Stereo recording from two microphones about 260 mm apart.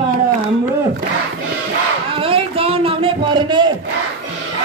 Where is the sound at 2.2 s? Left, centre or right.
Right.